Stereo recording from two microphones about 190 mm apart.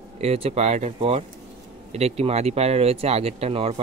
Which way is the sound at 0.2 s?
30° right (ahead or behind).